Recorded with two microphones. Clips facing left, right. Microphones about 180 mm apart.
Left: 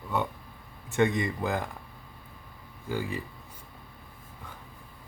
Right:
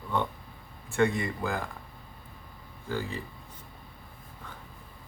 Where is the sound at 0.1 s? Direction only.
10° left (ahead or behind).